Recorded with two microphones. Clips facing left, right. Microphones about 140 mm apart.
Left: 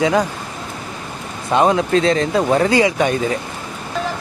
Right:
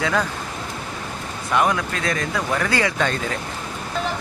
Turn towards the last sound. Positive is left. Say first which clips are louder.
# left 6 dB
turn(degrees=15)  # may be behind; listen again after turning